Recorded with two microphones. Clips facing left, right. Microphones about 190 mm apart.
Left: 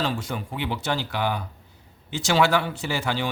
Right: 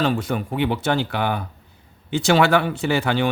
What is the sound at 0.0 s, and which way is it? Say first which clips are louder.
A man's voice: right 6 dB; 55° right (ahead or behind).